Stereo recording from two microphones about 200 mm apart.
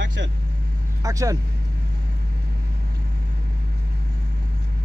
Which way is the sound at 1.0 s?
15° right (ahead or behind).